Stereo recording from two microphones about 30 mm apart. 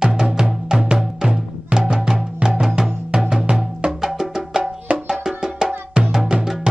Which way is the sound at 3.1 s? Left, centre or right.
Right.